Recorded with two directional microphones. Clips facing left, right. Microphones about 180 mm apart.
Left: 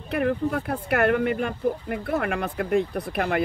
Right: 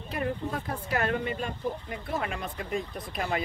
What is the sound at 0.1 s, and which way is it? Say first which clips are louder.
Speech: left 8 dB; 65° left (ahead or behind).